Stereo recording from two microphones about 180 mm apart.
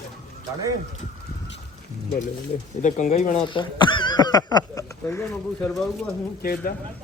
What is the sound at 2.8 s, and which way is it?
Speech, 45° left (ahead or behind).